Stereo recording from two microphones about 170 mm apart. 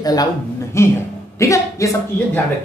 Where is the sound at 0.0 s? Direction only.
20° left (ahead or behind).